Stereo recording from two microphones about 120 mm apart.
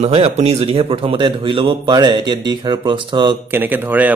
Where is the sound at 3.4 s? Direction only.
15° right (ahead or behind).